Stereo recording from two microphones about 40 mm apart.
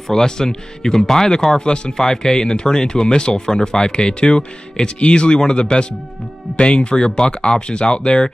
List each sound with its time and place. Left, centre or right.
0.1 s speech: centre